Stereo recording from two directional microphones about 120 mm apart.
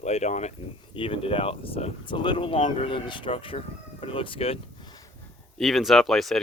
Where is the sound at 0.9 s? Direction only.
50° left (ahead or behind).